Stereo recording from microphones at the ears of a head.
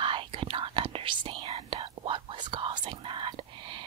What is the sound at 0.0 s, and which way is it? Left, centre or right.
Whispering, right.